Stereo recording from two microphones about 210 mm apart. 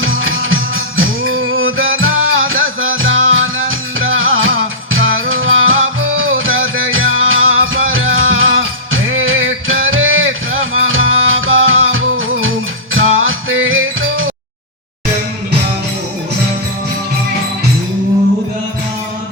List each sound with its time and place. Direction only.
0.0 s music: 70° right (ahead or behind)